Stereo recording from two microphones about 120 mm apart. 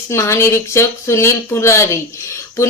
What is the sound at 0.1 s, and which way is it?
Speech, 25° left (ahead or behind).